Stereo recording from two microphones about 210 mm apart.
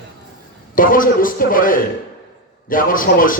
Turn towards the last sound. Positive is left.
turn(degrees=40)  # may be behind; listen again after turning